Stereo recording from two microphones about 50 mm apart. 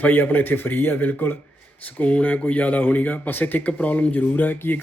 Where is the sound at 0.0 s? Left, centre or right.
Left.